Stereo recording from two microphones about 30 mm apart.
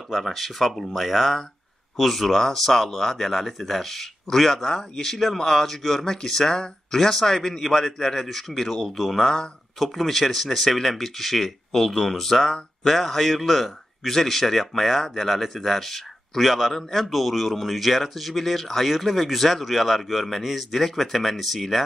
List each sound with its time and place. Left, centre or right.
0.1 s a man's voice: centre